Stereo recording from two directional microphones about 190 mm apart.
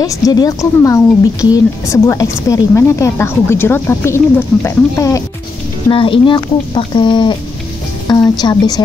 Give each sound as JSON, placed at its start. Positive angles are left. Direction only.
{"t": 0.0, "sound": "a woman's voice", "side_deg": 20}
{"t": 5.9, "sound": "speech", "side_deg": 30}